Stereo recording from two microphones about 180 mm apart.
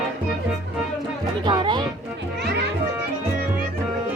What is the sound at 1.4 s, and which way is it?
Music, 25° right (ahead or behind).